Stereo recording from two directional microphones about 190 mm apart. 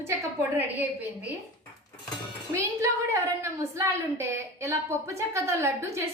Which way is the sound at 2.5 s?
15° right (ahead or behind).